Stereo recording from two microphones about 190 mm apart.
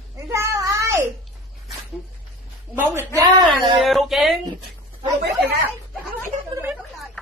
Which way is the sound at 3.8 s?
Centre (ahead or behind).